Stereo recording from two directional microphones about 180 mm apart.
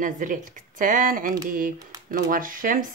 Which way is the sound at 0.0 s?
45° right (ahead or behind).